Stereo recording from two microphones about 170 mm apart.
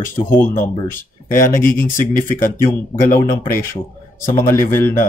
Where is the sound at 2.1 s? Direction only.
50° left (ahead or behind).